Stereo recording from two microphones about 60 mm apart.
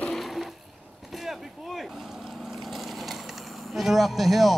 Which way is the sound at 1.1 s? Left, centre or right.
Centre.